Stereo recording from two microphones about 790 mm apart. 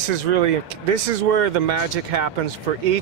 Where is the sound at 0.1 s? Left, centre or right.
Right.